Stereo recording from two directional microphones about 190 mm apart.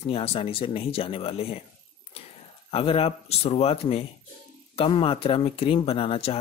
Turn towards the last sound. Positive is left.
turn(degrees=30)  # may be behind; listen again after turning